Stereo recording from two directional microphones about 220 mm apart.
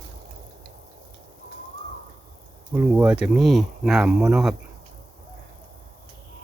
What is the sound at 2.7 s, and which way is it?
Speech, 5° right (ahead or behind).